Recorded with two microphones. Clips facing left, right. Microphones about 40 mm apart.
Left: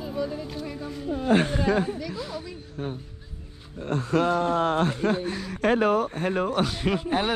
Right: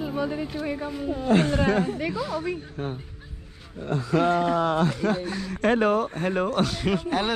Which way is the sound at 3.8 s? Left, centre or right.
Left.